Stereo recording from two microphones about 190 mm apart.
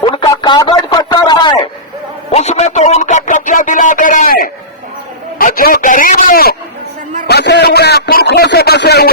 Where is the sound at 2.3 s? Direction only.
35° left (ahead or behind).